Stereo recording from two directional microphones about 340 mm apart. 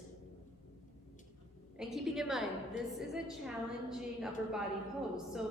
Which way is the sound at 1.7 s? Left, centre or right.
Centre.